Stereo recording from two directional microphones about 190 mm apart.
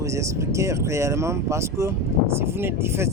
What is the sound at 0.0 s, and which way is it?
A man's voice, 15° right (ahead or behind).